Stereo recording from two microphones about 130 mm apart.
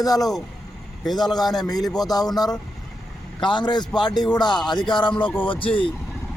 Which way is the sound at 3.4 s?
35° left (ahead or behind).